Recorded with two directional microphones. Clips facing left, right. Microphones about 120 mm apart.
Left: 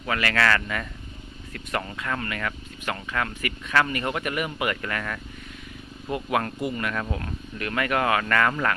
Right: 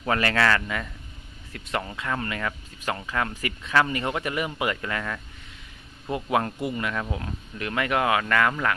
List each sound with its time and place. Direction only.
0.0 s speech: 30° right (ahead or behind); by 8.5 s 10° right (ahead or behind)